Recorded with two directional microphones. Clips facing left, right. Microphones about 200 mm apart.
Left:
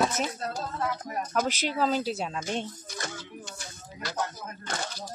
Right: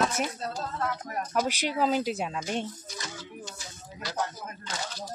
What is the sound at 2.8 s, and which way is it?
Speech, 55° left (ahead or behind).